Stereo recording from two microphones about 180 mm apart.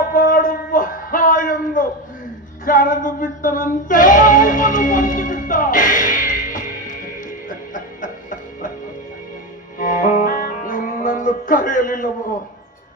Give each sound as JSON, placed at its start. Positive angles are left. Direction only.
{"t": 0.1, "sound": "a sound", "side_deg": 50}
{"t": 7.7, "sound": "music", "side_deg": 45}
{"t": 9.7, "sound": "music", "side_deg": 45}